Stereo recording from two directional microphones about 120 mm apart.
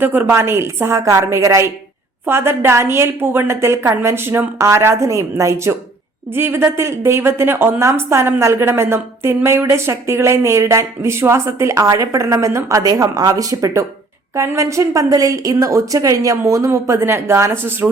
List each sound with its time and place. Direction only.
0.0 s a woman's voice: 15° right (ahead or behind)